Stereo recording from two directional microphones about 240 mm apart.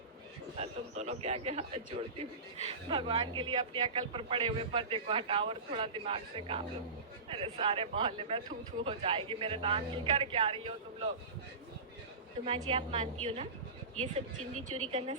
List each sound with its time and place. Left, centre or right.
0.5 s speech: right
12.5 s speech: right
14.5 s a woman's voice: right